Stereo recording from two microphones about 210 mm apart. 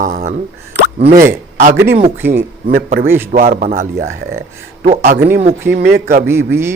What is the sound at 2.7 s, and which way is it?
A man's voice, 50° right (ahead or behind).